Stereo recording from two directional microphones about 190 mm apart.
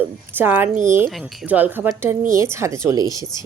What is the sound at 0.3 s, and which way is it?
Speech, 10° right (ahead or behind).